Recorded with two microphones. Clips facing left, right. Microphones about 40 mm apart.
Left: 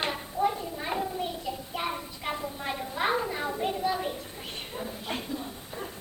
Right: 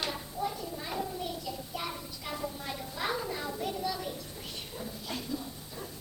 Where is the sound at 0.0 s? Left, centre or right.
Left.